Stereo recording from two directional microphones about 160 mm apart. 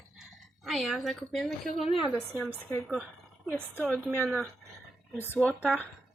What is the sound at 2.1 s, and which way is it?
Speech, 20° left (ahead or behind).